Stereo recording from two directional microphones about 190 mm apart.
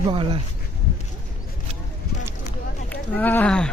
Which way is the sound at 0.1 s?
25° right (ahead or behind).